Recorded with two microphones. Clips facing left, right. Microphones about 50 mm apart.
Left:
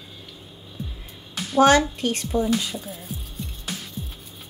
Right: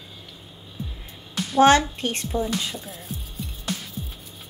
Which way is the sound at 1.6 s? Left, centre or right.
Right.